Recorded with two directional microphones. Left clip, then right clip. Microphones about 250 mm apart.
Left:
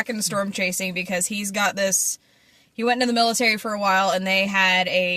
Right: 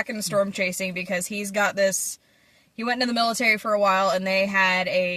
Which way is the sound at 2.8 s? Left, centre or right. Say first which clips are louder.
Left 3 dB; centre.